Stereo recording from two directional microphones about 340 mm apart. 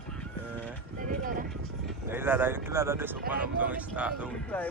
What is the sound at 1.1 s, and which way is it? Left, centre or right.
Music, right.